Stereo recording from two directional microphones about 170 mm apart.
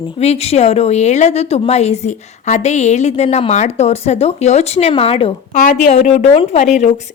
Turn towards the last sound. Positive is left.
turn(degrees=45)  # may be behind; listen again after turning